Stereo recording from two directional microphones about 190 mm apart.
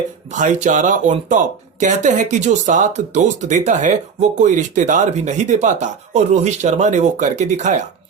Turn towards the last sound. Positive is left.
turn(degrees=-40)  # may be behind; listen again after turning